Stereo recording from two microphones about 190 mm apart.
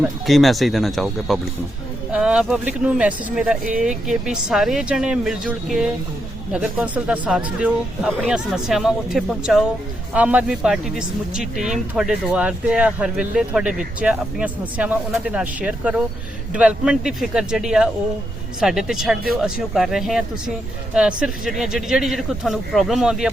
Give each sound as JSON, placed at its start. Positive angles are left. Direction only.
{"t": 0.0, "sound": "speech", "side_deg": 0}
{"t": 3.6, "sound": "speech", "side_deg": -45}
{"t": 3.8, "sound": "speech", "side_deg": -5}